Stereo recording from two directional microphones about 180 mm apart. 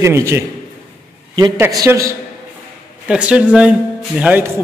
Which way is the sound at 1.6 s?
15° right (ahead or behind).